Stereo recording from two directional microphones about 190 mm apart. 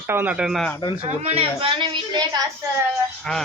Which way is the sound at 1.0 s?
30° right (ahead or behind).